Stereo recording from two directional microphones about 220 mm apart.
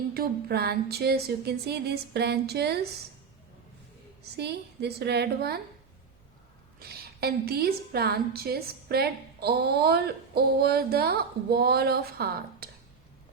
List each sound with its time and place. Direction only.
0.1 s a woman's voice: 45° right (ahead or behind)
4.4 s a woman's voice: 50° right (ahead or behind)
6.7 s a woman's voice: 45° right (ahead or behind)